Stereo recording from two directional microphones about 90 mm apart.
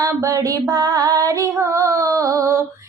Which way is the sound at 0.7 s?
45° right (ahead or behind).